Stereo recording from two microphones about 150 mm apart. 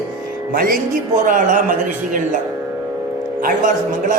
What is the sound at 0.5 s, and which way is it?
Music, 70° right (ahead or behind).